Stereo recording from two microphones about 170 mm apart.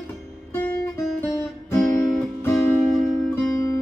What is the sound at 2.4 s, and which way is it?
Music, 10° left (ahead or behind).